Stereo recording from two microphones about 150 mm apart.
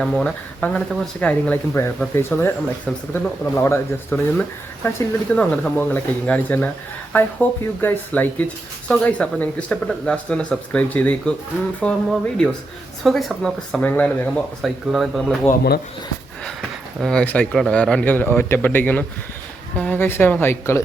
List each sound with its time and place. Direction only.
0.0 s speech: 5° left (ahead or behind)
16.4 s speech: 5° left (ahead or behind)